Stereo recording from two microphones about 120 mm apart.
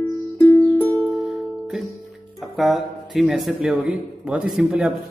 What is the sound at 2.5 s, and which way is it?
Speech, centre (ahead or behind).